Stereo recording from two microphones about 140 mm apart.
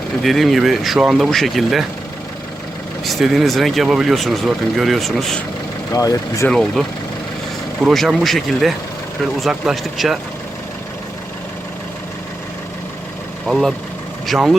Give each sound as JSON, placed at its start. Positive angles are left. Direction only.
{"t": 0.2, "sound": "speech", "side_deg": 0}
{"t": 3.0, "sound": "speech", "side_deg": 0}
{"t": 5.9, "sound": "speech", "side_deg": 25}
{"t": 6.5, "sound": "speech", "side_deg": 5}
{"t": 13.5, "sound": "speech", "side_deg": 0}